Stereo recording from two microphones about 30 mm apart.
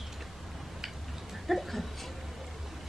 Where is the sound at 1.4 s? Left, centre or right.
Centre.